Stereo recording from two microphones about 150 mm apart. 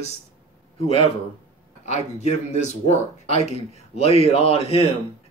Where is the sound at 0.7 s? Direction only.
40° left (ahead or behind).